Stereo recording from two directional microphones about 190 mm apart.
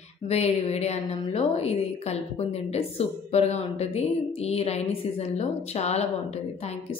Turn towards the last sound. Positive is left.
turn(degrees=35)  # may be behind; listen again after turning